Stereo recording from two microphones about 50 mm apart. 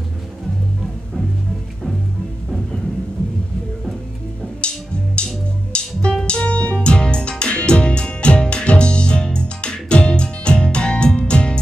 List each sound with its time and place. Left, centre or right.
4.6 s music: left